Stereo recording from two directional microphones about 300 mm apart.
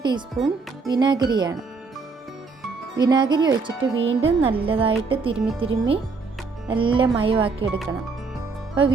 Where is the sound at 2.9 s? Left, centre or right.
Centre.